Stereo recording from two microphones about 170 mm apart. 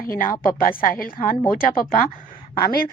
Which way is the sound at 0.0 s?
55° left (ahead or behind).